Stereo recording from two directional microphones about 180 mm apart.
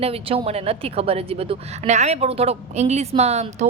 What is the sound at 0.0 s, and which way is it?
A woman's voice, 30° right (ahead or behind).